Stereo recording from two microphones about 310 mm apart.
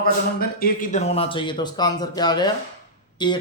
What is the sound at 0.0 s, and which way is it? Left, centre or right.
A man's voice, left.